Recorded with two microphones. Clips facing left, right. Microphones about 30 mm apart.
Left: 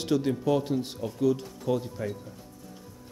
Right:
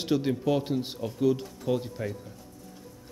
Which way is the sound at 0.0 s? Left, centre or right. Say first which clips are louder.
Even; centre.